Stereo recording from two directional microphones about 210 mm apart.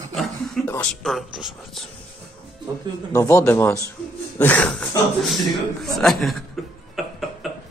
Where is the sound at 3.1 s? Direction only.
15° left (ahead or behind).